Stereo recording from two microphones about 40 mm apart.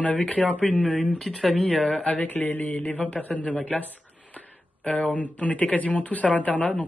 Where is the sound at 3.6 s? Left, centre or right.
Left.